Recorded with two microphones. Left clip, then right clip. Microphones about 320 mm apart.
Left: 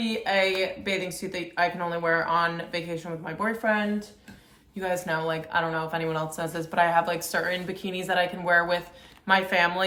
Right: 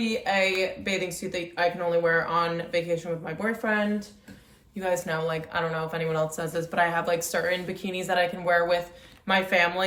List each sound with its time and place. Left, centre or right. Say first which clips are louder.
0.0 s a woman's voice: even; centre